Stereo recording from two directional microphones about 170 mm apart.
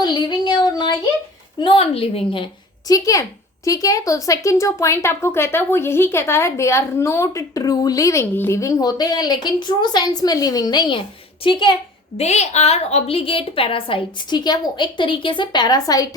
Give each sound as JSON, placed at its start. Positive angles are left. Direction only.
{"t": 0.0, "sound": "child singing", "side_deg": 25}
{"t": 1.6, "sound": "a woman's voice", "side_deg": 35}
{"t": 2.8, "sound": "a woman's voice", "side_deg": 20}
{"t": 12.1, "sound": "a woman's voice", "side_deg": 40}